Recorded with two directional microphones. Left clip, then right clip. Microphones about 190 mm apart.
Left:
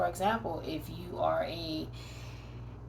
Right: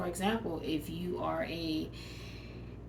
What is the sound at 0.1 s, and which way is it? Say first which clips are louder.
Speech: left 3 dB; 5° right (ahead or behind).